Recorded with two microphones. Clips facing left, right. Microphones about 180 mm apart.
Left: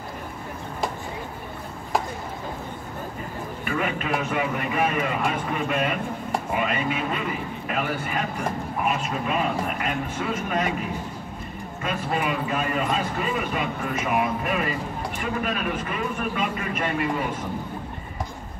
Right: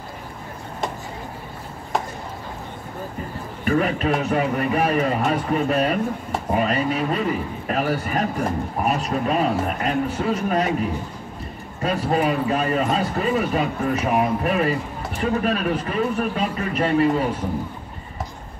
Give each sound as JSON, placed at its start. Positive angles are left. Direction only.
{"t": 3.6, "sound": "speech", "side_deg": -40}
{"t": 11.8, "sound": "speech", "side_deg": -35}